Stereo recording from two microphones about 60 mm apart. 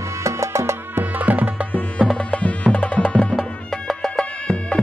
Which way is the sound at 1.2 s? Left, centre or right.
Right.